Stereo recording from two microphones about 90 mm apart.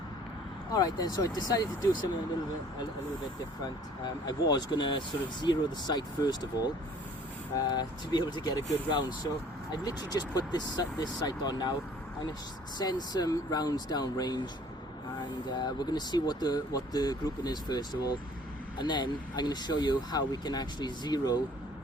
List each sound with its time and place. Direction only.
0.7 s speech: 45° left (ahead or behind)
3.6 s speech: 55° left (ahead or behind)
7.7 s speech: 55° left (ahead or behind)
9.8 s speech: 45° left (ahead or behind)
12.8 s speech: 50° left (ahead or behind)
15.5 s speech: 50° left (ahead or behind)